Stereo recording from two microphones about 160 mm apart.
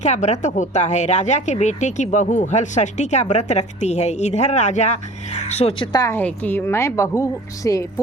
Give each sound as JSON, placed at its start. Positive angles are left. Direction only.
{"t": 0.0, "sound": "speech", "side_deg": 45}
{"t": 5.9, "sound": "a woman's voice", "side_deg": 20}